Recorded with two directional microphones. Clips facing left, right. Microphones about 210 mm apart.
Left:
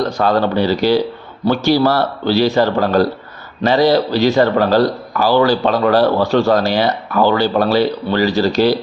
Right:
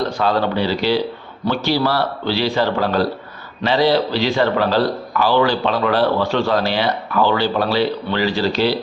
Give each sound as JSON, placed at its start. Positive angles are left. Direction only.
{"t": 0.2, "sound": "a man's voice", "side_deg": 45}